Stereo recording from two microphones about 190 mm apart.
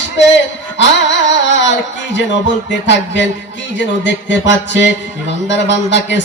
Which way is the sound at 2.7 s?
70° left (ahead or behind).